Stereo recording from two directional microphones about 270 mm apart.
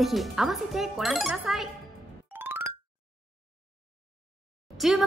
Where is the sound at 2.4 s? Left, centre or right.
Centre.